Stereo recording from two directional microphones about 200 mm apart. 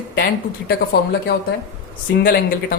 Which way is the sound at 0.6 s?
55° left (ahead or behind).